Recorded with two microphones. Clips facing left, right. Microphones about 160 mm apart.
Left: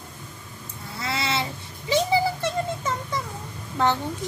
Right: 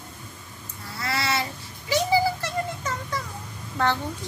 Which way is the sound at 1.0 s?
20° left (ahead or behind).